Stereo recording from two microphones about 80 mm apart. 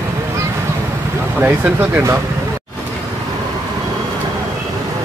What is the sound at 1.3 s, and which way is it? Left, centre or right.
Speech, right.